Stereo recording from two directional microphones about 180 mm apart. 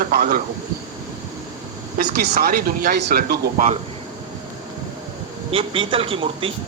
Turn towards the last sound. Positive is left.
turn(degrees=-30)  # may be behind; listen again after turning